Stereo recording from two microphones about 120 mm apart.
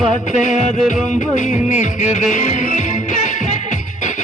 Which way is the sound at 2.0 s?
80° left.